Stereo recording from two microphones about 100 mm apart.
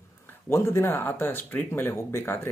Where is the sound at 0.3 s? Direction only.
25° left (ahead or behind).